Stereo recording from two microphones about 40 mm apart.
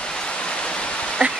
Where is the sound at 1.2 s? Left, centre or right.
Right.